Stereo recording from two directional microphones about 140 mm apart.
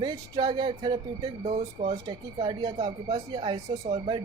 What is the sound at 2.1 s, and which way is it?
Speech, 35° right (ahead or behind).